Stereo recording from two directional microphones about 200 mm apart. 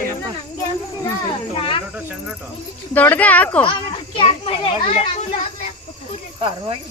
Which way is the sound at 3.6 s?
25° left (ahead or behind).